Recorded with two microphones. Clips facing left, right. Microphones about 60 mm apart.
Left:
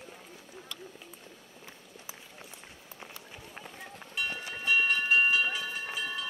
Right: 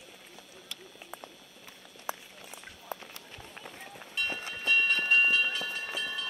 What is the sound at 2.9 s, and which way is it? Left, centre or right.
Run, centre.